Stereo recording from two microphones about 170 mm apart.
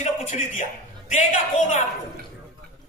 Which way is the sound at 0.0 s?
45° left (ahead or behind).